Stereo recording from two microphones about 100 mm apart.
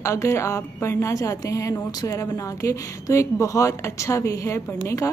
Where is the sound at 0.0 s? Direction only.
30° left (ahead or behind).